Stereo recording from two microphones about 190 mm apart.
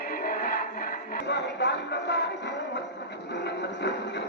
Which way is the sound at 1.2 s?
65° left (ahead or behind).